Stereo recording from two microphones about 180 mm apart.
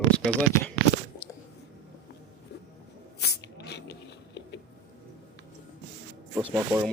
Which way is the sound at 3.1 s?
65° left (ahead or behind).